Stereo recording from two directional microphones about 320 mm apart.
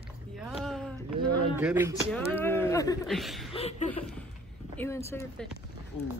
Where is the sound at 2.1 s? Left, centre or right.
Centre.